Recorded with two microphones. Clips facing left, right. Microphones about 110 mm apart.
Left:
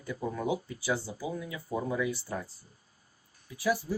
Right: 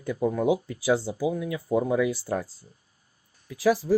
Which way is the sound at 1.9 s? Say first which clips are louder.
Right 7 dB; 90° right.